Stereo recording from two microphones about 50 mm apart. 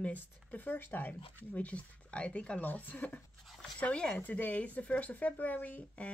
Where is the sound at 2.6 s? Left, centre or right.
Left.